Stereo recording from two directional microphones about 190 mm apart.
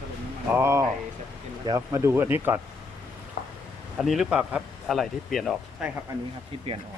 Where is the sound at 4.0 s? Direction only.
Centre (ahead or behind).